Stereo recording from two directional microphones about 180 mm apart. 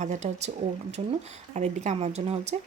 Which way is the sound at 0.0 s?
40° right (ahead or behind).